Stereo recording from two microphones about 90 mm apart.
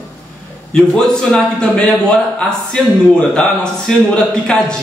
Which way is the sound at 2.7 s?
10° left (ahead or behind).